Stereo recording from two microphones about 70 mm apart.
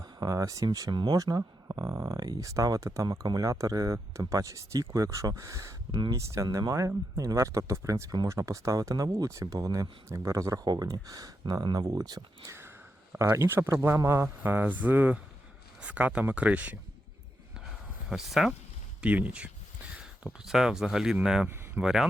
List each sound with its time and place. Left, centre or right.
0.0 s speech: right
1.7 s speech: right
10.1 s speech: right
12.5 s sniff: right
13.1 s speech: right
14.4 s speech: right
18.1 s speech: centre
19.0 s speech: right
20.2 s speech: centre